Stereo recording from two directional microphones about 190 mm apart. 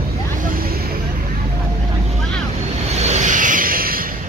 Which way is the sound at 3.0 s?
35° right (ahead or behind).